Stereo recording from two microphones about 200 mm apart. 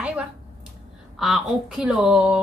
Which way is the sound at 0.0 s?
5° right (ahead or behind).